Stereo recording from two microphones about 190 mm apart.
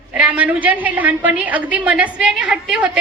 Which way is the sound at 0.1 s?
5° right (ahead or behind).